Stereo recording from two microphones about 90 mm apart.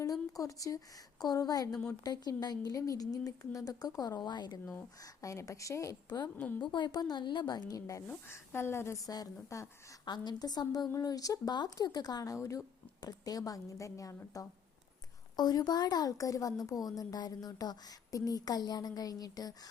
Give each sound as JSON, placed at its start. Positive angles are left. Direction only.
{"t": 0.0, "sound": "a sound", "side_deg": 40}
{"t": 1.2, "sound": "a woman's voice", "side_deg": 45}
{"t": 4.9, "sound": "a woman's voice", "side_deg": 40}
{"t": 6.1, "sound": "a woman's voice", "side_deg": 50}
{"t": 6.3, "sound": "a woman's voice", "side_deg": 20}
{"t": 6.6, "sound": "a woman's voice", "side_deg": 60}
{"t": 9.0, "sound": "a woman's voice", "side_deg": 45}
{"t": 15.4, "sound": "a woman's voice", "side_deg": 50}